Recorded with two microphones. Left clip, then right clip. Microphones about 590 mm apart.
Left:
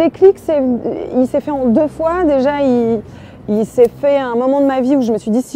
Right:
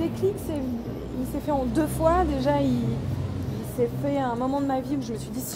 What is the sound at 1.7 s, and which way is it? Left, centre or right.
Speech, left.